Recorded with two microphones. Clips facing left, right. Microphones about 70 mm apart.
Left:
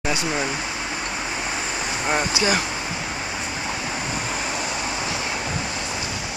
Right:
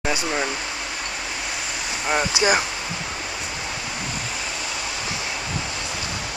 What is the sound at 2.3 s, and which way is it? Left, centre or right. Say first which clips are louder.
Speech: right 2 dB; left.